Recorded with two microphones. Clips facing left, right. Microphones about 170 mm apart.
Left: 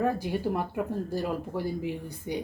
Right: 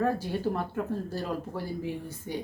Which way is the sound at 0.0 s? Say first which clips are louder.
Even; 15° left (ahead or behind).